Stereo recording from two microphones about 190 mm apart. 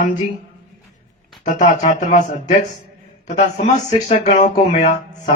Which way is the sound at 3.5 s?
40° left (ahead or behind).